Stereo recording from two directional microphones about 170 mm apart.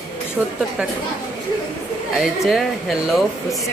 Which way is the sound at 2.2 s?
Centre (ahead or behind).